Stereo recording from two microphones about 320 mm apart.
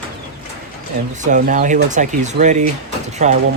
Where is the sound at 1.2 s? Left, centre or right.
Right.